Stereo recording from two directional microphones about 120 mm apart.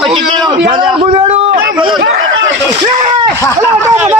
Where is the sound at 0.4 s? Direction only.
40° right (ahead or behind).